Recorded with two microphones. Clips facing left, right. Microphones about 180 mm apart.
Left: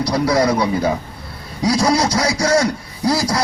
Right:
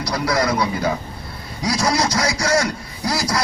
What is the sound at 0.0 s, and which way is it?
A man's voice, 30° left (ahead or behind).